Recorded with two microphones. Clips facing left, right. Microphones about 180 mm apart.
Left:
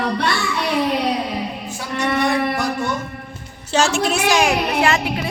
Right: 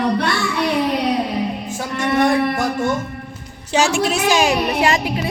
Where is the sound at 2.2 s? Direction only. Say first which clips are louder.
Right 5 dB; 45° right (ahead or behind).